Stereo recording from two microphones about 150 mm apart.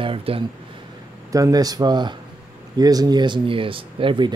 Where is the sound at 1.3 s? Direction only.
25° right (ahead or behind).